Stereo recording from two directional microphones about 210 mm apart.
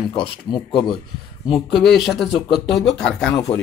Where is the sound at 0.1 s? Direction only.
20° left (ahead or behind).